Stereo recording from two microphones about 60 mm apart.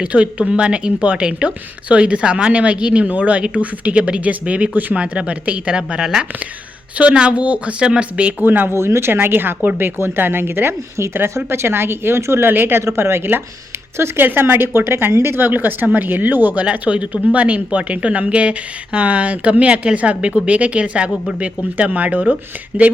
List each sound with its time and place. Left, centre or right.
0.0 s a woman's voice: right
4.9 s a woman's voice: centre
8.4 s speech: right
10.9 s speech: right
12.5 s speech: right
13.0 s speech: right
14.3 s a woman's voice: right